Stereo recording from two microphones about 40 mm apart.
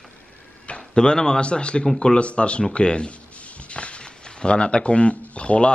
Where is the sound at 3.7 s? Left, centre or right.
Left.